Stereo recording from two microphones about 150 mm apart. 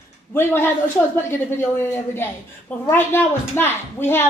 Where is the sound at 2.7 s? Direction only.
10° left (ahead or behind).